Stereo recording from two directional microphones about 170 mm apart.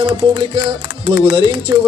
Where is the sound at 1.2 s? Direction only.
35° right (ahead or behind).